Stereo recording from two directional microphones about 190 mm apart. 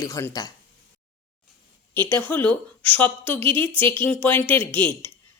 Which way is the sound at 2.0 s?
10° left (ahead or behind).